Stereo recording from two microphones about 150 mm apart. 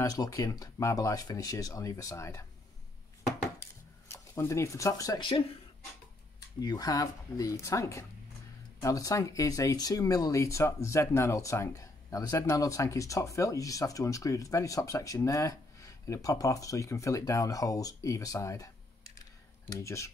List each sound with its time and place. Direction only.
0.0 s speech: 25° left (ahead or behind)
3.6 s dishes: 15° left (ahead or behind)
4.1 s speech: 15° left (ahead or behind)
6.6 s speech: 25° left (ahead or behind)